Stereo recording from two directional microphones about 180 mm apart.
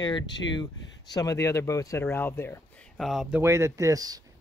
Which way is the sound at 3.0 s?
Centre (ahead or behind).